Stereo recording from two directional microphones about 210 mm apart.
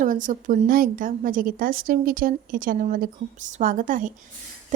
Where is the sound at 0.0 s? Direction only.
40° right (ahead or behind).